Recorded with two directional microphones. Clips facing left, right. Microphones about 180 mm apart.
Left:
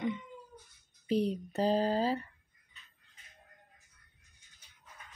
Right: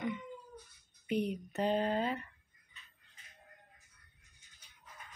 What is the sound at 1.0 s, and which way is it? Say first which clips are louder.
Speech: left 4 dB; 35° left (ahead or behind).